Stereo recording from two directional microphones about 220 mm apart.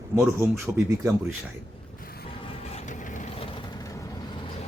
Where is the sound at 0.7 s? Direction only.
10° right (ahead or behind).